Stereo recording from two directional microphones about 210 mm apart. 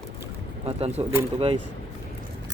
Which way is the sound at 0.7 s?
30° right (ahead or behind).